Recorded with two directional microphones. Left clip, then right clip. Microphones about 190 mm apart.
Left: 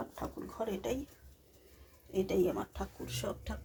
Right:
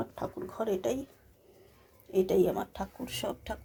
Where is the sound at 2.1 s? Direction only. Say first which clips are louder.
Right 5 dB; 60° right (ahead or behind).